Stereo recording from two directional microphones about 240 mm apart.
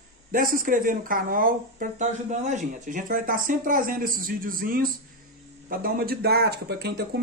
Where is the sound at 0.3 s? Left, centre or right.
Right.